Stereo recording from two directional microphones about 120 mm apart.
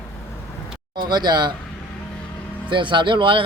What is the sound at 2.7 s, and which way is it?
Speech, 40° right (ahead or behind).